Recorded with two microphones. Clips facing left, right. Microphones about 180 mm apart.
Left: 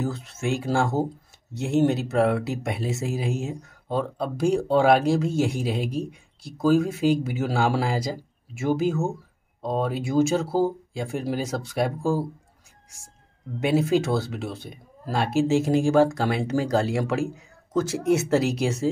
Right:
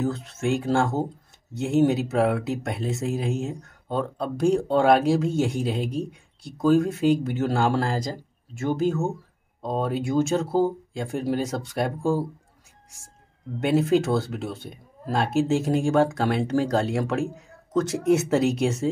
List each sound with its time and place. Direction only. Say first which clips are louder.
0.0 s speech: right 2 dB; centre (ahead or behind)
13.6 s speech: right 1 dB; centre (ahead or behind)